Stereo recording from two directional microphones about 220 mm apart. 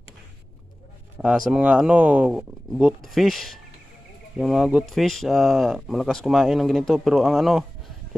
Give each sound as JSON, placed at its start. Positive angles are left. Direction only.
{"t": 1.1, "sound": "speech", "side_deg": -5}